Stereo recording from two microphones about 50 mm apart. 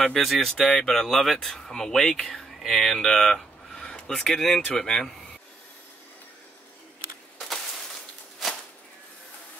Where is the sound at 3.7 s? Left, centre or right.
Left.